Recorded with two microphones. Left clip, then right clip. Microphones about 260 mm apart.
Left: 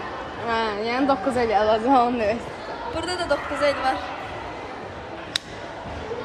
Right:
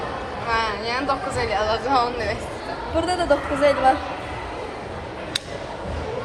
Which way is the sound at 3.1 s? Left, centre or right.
Centre.